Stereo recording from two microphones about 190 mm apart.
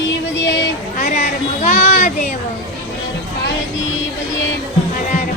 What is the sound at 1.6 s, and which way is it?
Children playing, 40° left (ahead or behind).